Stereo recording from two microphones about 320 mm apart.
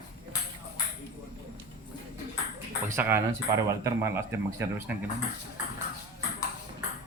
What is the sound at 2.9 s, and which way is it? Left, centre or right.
Speech, centre.